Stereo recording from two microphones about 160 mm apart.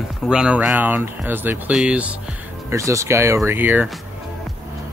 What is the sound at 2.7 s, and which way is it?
Speech, 20° right (ahead or behind).